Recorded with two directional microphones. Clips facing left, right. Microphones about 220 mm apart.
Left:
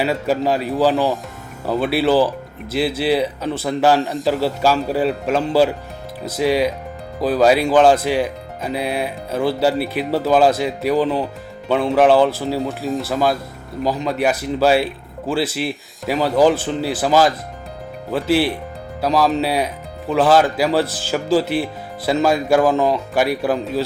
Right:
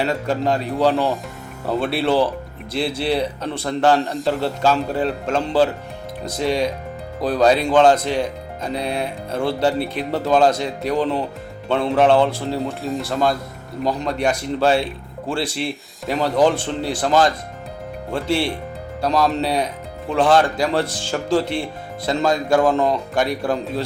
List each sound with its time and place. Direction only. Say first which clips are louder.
0.0 s speech: left 2 dB; 5° left (ahead or behind)